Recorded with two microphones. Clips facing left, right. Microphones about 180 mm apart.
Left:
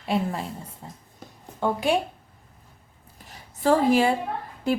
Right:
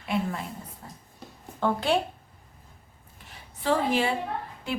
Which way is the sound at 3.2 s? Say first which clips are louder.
Left 5 dB; 45° left (ahead or behind).